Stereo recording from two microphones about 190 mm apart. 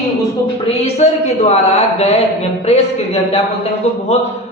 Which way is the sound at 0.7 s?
35° left (ahead or behind).